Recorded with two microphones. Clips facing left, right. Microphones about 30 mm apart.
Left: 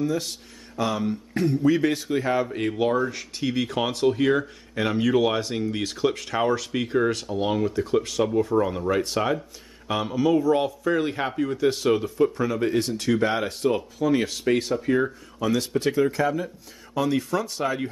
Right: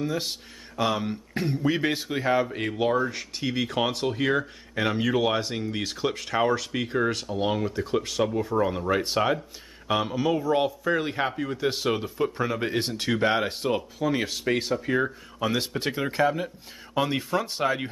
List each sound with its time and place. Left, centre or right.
0.0 s speech: right
15.3 s speech: right